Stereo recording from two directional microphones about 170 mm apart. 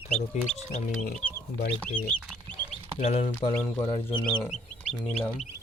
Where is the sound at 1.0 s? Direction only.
55° left (ahead or behind).